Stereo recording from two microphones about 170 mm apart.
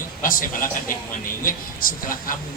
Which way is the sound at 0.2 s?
55° left (ahead or behind).